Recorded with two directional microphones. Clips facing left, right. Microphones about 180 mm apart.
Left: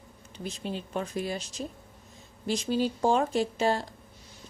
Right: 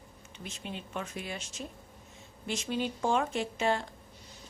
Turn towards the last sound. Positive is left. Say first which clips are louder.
# left 4 dB
turn(degrees=35)  # may be behind; listen again after turning